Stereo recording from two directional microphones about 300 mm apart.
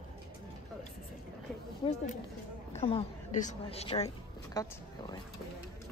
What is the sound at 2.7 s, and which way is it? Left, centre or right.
Speech, left.